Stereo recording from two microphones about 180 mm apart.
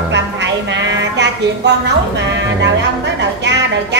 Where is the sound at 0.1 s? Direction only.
80° right.